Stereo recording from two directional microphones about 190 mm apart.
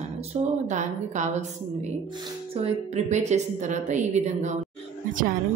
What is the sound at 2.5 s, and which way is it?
Speech, 35° right (ahead or behind).